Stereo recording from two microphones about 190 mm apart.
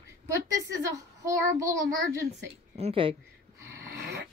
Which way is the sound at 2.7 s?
30° right (ahead or behind).